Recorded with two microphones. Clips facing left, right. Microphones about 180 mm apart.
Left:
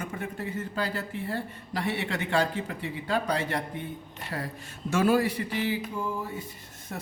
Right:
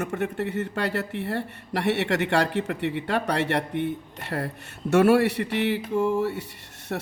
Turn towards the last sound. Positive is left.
turn(degrees=-60)  # may be behind; listen again after turning